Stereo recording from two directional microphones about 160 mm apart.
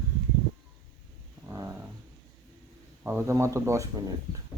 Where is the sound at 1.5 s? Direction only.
20° right (ahead or behind).